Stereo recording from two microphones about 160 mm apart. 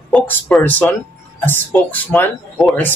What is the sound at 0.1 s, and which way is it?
A man's voice, 5° left (ahead or behind).